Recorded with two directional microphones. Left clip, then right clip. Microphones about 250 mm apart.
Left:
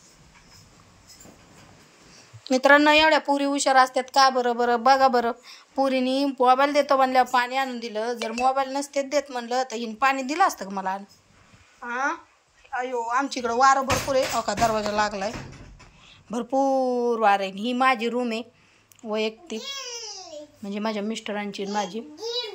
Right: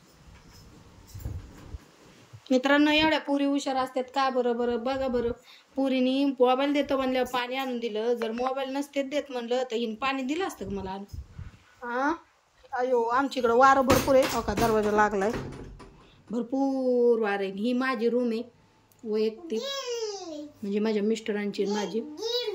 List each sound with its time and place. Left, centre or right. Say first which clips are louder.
2.5 s speech: left 6 dB; centre
3.4 s speech: left 9 dB; left
5.1 s speech: left 6 dB; centre
11.8 s speech: left 1 dB; centre
20.6 s speech: right 2 dB; centre